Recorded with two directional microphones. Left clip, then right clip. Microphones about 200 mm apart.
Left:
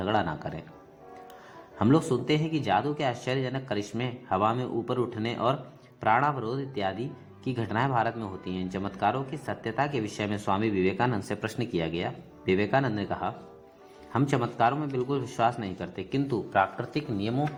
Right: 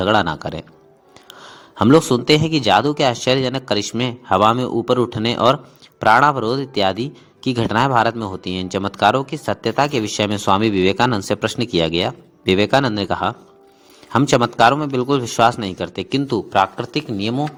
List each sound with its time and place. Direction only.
0.0 s a man's voice: 30° right (ahead or behind)